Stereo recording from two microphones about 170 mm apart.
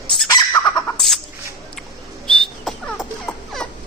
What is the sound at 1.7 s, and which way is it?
Fowl, 5° left (ahead or behind).